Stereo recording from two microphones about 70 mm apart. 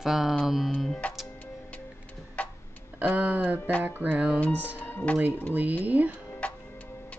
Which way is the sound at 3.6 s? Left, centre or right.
Centre.